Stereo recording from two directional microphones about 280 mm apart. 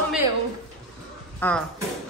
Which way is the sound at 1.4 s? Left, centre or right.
Centre.